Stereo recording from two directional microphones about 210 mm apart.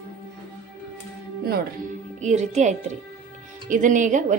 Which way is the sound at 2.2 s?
35° right (ahead or behind).